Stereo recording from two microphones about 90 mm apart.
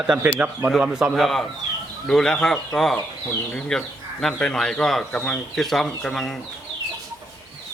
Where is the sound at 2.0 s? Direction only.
5° left (ahead or behind).